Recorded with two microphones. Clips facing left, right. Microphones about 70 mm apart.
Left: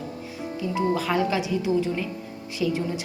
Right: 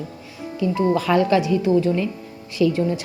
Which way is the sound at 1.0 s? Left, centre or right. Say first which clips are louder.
Right 6 dB; right.